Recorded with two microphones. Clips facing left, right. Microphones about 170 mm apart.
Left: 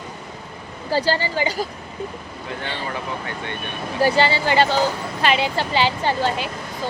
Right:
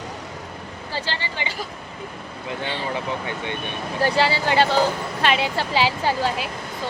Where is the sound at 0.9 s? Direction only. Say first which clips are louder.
Left 9 dB; 40° left (ahead or behind).